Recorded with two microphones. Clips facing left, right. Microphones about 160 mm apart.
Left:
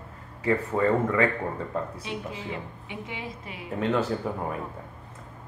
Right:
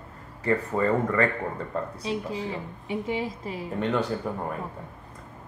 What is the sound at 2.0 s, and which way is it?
A woman's voice, 35° right (ahead or behind).